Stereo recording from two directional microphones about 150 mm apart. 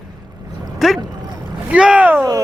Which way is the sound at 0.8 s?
Centre (ahead or behind).